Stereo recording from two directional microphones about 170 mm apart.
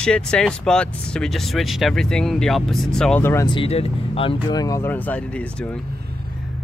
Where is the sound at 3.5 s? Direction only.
35° left (ahead or behind).